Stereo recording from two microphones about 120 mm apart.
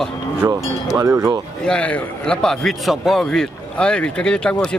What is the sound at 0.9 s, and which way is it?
Speech, 25° right (ahead or behind).